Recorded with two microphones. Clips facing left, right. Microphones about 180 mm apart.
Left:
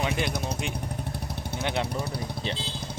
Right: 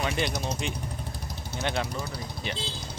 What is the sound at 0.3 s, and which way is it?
Speech, 55° left (ahead or behind).